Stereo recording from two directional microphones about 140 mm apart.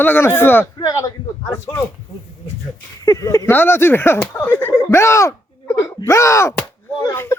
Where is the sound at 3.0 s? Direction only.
25° left (ahead or behind).